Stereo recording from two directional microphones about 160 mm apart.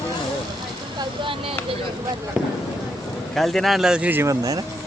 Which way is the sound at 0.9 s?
30° right (ahead or behind).